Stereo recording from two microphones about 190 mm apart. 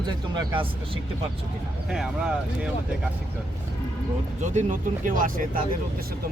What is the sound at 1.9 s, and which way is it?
Speech, 5° right (ahead or behind).